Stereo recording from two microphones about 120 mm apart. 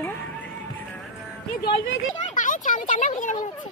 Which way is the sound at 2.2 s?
90° left.